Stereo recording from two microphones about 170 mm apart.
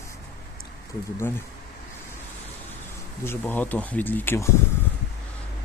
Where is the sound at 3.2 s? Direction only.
10° left (ahead or behind).